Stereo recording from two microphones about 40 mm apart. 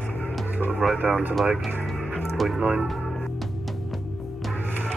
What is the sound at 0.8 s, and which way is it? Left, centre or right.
Speech, right.